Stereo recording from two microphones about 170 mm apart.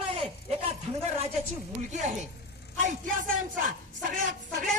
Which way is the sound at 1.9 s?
45° right (ahead or behind).